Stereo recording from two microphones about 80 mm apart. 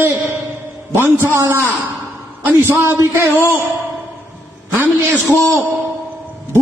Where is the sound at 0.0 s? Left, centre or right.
Right.